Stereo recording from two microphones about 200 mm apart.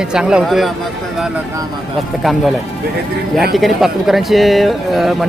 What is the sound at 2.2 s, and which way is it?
Speech, centre (ahead or behind).